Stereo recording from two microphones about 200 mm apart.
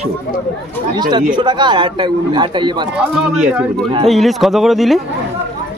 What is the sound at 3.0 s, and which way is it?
Speech, 5° right (ahead or behind).